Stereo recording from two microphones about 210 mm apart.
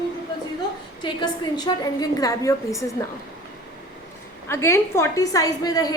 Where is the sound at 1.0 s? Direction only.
20° left (ahead or behind).